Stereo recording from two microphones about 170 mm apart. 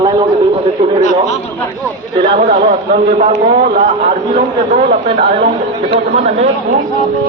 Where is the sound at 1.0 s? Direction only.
40° left (ahead or behind).